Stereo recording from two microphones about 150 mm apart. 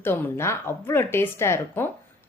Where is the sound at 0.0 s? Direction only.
15° left (ahead or behind).